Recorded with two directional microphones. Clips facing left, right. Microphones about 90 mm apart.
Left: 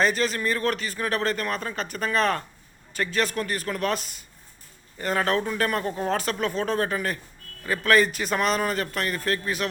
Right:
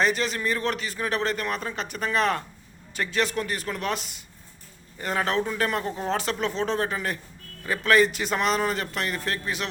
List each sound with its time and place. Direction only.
0.0 s speech: 20° right (ahead or behind)